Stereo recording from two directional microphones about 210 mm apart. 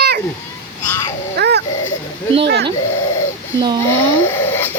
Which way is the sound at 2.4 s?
50° right (ahead or behind).